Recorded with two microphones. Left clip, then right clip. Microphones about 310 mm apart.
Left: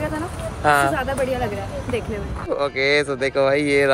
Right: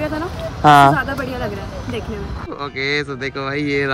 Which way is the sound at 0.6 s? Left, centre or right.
Right.